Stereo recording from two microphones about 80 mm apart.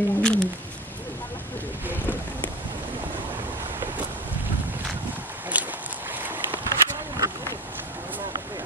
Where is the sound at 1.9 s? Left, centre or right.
Left.